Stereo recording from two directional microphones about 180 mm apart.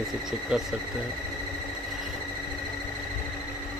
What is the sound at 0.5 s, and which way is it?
Speech, 5° right (ahead or behind).